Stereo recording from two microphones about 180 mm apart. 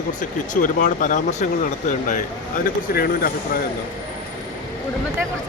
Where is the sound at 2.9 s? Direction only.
55° left (ahead or behind).